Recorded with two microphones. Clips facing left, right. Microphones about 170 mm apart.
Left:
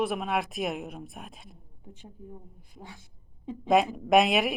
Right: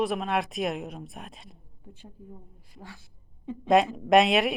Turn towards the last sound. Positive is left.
turn(degrees=0)  # may be behind; listen again after turning